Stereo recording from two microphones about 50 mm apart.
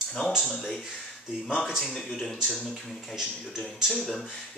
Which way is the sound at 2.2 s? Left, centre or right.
Centre.